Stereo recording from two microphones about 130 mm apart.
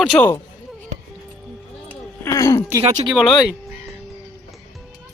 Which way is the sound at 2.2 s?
25° left (ahead or behind).